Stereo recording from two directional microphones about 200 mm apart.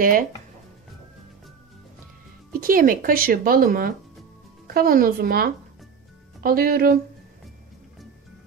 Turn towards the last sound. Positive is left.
turn(degrees=-45)  # may be behind; listen again after turning